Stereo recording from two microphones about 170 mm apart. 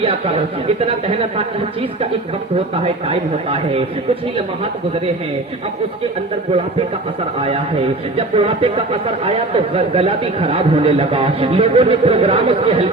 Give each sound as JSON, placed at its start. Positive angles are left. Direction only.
{"t": 0.0, "sound": "speech", "side_deg": -35}
{"t": 2.8, "sound": "speech", "side_deg": -35}
{"t": 8.1, "sound": "speech", "side_deg": -35}